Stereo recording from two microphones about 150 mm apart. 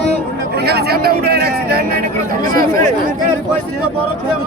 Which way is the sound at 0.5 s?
90° right.